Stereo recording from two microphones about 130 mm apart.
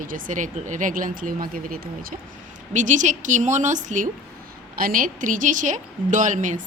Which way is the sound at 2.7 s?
70° right (ahead or behind).